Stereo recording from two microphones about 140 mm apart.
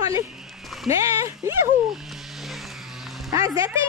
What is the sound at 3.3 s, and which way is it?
Speech, 25° right (ahead or behind).